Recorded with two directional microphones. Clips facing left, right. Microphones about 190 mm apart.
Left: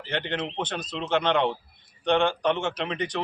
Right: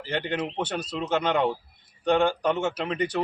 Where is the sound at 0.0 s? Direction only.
10° right (ahead or behind).